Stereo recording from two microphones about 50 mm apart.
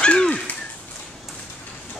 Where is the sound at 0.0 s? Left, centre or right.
Left.